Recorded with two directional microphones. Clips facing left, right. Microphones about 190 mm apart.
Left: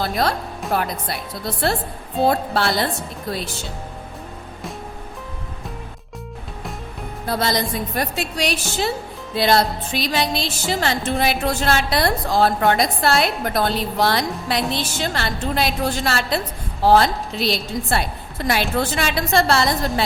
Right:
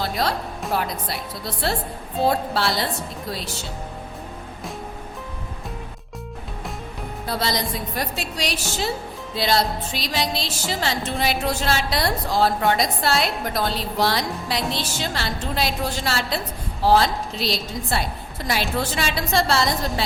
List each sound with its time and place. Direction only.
0.0 s music: 55° left (ahead or behind)
0.7 s a woman's voice: 55° left (ahead or behind)
2.2 s a woman's voice: 55° left (ahead or behind)
7.3 s a woman's voice: 50° left (ahead or behind)